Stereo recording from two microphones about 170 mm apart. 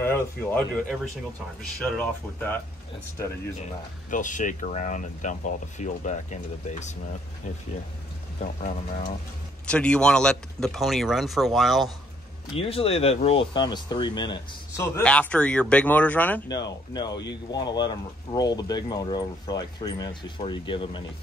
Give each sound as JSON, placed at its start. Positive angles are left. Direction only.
{"t": 0.0, "sound": "speech", "side_deg": 10}
{"t": 2.0, "sound": "speech", "side_deg": 10}
{"t": 4.1, "sound": "speech", "side_deg": 50}
{"t": 9.7, "sound": "speech", "side_deg": 5}
{"t": 12.5, "sound": "speech", "side_deg": 35}
{"t": 15.0, "sound": "speech", "side_deg": 10}
{"t": 16.4, "sound": "speech", "side_deg": 25}